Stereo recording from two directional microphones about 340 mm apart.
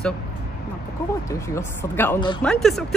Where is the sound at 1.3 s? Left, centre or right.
Centre.